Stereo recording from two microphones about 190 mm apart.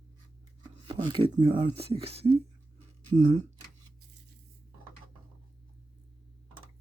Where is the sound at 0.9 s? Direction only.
25° right (ahead or behind).